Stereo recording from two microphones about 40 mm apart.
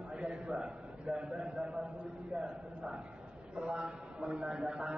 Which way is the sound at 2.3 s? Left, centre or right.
Centre.